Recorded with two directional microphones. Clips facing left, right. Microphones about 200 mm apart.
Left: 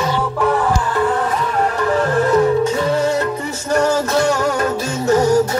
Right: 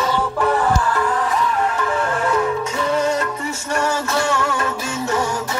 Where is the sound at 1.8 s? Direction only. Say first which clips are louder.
Left 5 dB; 35° left (ahead or behind).